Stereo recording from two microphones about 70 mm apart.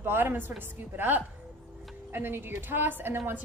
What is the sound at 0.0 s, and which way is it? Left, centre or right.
A woman's voice, right.